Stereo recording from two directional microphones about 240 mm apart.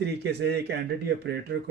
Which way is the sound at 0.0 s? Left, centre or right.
Right.